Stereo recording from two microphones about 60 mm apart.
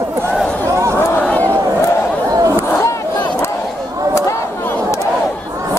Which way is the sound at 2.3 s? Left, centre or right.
Right.